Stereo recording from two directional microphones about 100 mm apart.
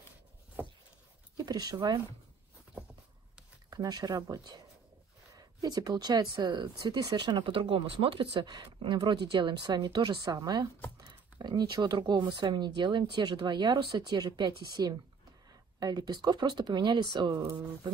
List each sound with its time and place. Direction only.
1.3 s speech: 40° right (ahead or behind)
3.7 s speech: 40° right (ahead or behind)